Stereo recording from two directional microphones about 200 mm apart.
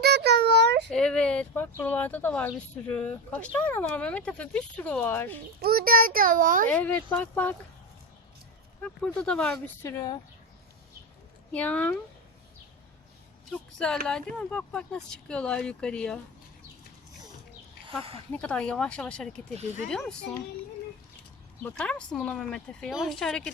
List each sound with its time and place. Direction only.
0.0 s a sound: 55° right (ahead or behind)
0.9 s speech: 5° left (ahead or behind)
5.6 s a child's voice: 50° right (ahead or behind)
6.7 s speech: 10° left (ahead or behind)
8.8 s speech: 5° left (ahead or behind)
11.5 s speech: 5° left (ahead or behind)
13.5 s speech: 5° left (ahead or behind)
17.8 s speech: 30° right (ahead or behind)
18.3 s speech: 5° left (ahead or behind)
21.6 s speech: 5° left (ahead or behind)